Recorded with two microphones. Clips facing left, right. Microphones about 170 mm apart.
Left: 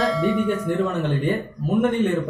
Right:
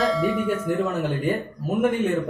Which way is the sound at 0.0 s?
Centre (ahead or behind).